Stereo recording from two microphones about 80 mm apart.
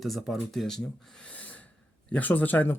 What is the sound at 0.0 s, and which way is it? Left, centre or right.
Speech, centre.